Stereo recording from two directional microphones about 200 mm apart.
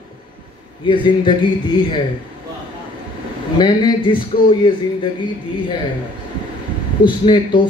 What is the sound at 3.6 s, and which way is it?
Speech, 20° left (ahead or behind).